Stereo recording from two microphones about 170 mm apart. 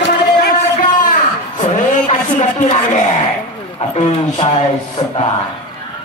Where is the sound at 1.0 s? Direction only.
50° left (ahead or behind).